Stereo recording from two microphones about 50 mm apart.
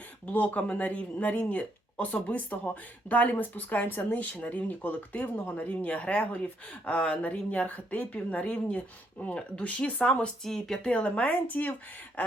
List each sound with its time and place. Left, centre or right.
0.3 s speech: left
10.4 s speech: centre
10.9 s speech: left